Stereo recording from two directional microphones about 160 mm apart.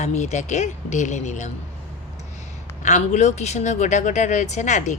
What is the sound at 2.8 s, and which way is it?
A woman's voice, 45° left (ahead or behind).